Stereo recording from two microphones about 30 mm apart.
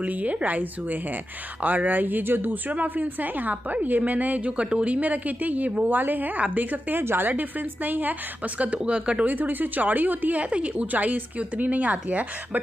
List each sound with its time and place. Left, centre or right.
0.0 s a woman's voice: right
1.8 s a woman's voice: right
4.5 s speech: right
4.8 s speech: right
5.9 s a woman's voice: right
6.5 s a woman's voice: right
8.8 s speech: right
9.2 s a woman's voice: right
10.4 s speech: right
10.9 s speech: right